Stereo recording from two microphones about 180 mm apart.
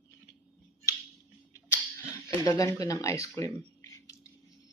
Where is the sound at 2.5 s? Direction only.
20° left (ahead or behind).